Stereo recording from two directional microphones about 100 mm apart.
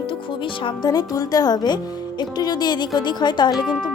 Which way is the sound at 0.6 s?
45° left (ahead or behind).